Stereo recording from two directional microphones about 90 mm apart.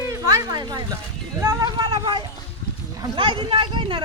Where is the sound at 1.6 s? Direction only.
50° right (ahead or behind).